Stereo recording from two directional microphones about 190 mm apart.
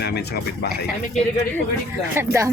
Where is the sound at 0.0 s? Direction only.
60° left (ahead or behind).